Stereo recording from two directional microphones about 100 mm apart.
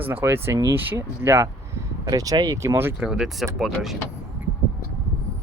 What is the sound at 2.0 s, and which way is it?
Speech, 40° right (ahead or behind).